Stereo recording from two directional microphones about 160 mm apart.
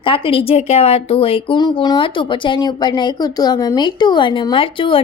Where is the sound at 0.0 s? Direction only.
35° left (ahead or behind).